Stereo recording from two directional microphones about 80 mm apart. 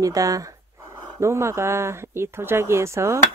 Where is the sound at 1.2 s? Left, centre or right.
Right.